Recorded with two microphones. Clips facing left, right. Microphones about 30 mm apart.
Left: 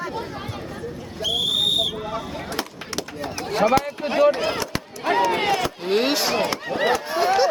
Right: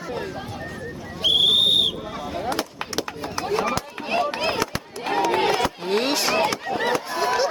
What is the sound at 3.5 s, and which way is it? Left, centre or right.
Run, left.